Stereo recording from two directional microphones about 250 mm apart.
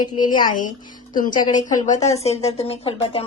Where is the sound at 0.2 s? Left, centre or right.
Left.